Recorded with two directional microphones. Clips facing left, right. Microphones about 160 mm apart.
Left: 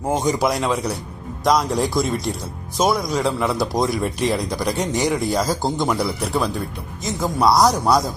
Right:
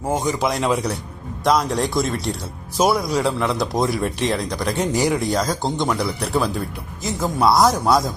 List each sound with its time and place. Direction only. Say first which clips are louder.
0.1 s speech: left 2 dB; 15° left (ahead or behind)
0.4 s speech: even; centre (ahead or behind)